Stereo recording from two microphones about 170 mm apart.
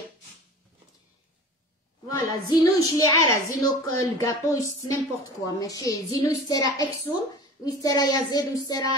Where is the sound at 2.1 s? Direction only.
20° left (ahead or behind).